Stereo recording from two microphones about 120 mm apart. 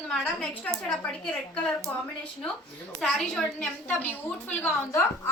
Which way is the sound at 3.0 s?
Centre (ahead or behind).